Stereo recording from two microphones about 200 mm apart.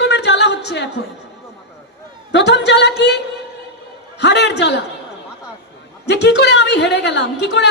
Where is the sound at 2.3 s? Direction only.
60° left (ahead or behind).